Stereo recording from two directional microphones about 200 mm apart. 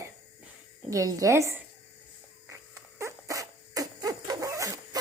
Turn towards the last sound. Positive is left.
turn(degrees=-15)  # may be behind; listen again after turning